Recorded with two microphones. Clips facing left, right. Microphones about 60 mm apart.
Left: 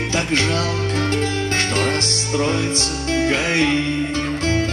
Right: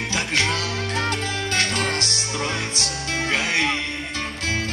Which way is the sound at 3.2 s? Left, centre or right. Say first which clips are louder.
Left 3 dB; left.